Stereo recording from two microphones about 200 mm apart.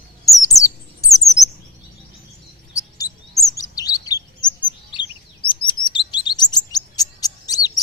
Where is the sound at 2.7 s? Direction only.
15° left (ahead or behind).